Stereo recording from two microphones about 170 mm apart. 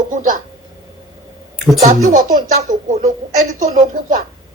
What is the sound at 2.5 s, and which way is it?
Speech, 50° right (ahead or behind).